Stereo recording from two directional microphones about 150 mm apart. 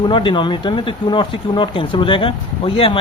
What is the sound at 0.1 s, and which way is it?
Speech, 35° left (ahead or behind).